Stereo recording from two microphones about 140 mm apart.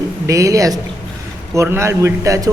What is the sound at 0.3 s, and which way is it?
A man's voice, 20° right (ahead or behind).